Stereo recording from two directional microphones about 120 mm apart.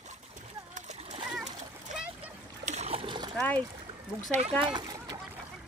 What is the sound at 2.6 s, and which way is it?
Splash, 65° right (ahead or behind).